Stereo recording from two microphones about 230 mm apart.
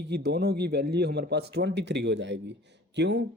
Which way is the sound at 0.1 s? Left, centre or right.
Right.